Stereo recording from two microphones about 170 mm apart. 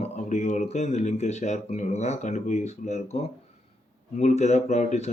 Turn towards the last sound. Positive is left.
turn(degrees=40)  # may be behind; listen again after turning